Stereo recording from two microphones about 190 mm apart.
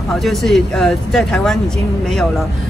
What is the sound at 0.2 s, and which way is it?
Speech, centre (ahead or behind).